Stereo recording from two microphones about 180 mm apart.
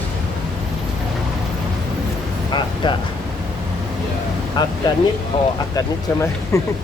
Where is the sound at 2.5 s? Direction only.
25° left (ahead or behind).